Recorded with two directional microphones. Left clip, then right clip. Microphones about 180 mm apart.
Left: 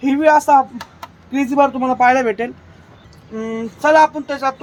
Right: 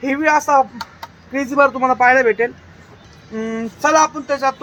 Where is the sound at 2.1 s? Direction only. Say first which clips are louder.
Right 2 dB; 65° left (ahead or behind).